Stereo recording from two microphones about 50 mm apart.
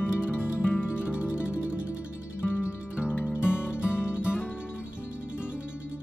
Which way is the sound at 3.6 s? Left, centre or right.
Left.